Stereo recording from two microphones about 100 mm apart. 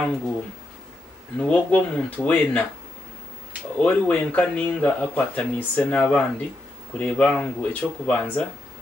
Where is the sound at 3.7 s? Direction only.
15° left (ahead or behind).